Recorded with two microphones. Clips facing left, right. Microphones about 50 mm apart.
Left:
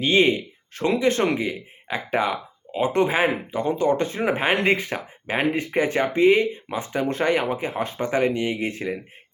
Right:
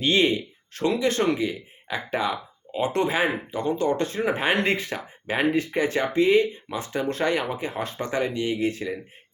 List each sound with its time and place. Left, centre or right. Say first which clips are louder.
0.2 s speech: left 3 dB; centre
8.2 s speech: right 1 dB; left